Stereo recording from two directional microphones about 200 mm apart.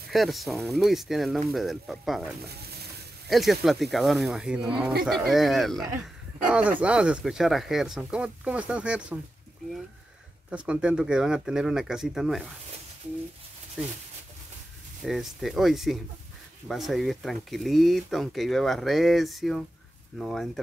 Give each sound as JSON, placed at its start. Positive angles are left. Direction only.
{"t": 0.1, "sound": "speech", "side_deg": 0}
{"t": 2.4, "sound": "stir", "side_deg": -50}
{"t": 3.3, "sound": "speech", "side_deg": 0}
{"t": 10.5, "sound": "speech", "side_deg": -5}
{"t": 15.0, "sound": "speech", "side_deg": 0}